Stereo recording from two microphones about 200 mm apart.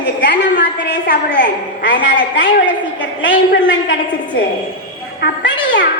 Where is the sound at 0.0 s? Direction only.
60° left (ahead or behind).